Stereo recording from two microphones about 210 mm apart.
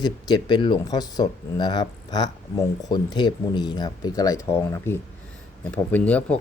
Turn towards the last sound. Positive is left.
turn(degrees=5)  # may be behind; listen again after turning